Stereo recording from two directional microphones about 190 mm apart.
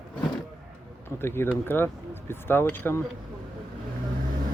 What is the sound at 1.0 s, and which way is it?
Speech, 10° left (ahead or behind).